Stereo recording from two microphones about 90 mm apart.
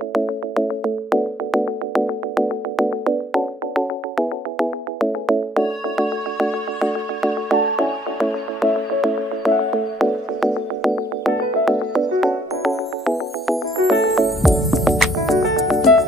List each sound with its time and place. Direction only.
0.1 s music: centre (ahead or behind)
5.9 s music: centre (ahead or behind)